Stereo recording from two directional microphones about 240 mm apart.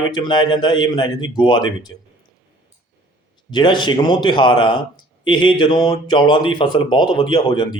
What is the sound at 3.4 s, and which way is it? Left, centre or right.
Speech, centre.